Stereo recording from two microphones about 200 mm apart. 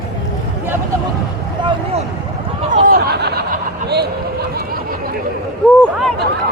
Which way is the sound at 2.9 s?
55° right (ahead or behind).